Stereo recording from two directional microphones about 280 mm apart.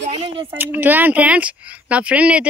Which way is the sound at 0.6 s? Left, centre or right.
Centre.